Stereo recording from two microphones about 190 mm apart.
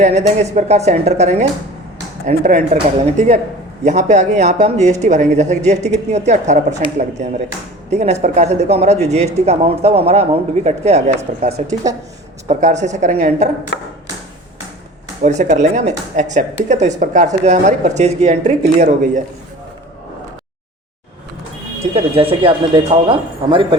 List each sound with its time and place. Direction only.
0.0 s speech: 35° right (ahead or behind)
7.9 s speech: 35° right (ahead or behind)
11.9 s speech: 20° right (ahead or behind)
12.5 s speech: 40° right (ahead or behind)
15.2 s speech: 40° right (ahead or behind)
21.9 s speech: 30° right (ahead or behind)